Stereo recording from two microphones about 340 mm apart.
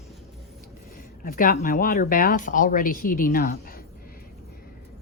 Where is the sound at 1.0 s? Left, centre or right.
Left.